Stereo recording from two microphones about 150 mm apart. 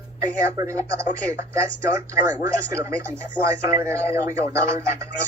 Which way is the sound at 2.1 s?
20° right (ahead or behind).